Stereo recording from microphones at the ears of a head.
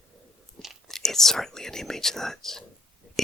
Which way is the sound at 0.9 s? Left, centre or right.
Centre.